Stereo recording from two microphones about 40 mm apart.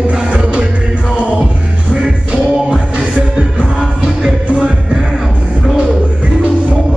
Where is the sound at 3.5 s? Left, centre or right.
Centre.